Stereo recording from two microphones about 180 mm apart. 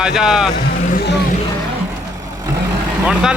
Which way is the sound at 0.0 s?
5° right (ahead or behind).